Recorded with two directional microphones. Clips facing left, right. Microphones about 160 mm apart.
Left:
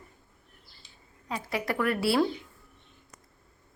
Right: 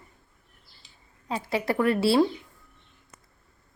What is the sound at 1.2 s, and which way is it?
Speech, 30° right (ahead or behind).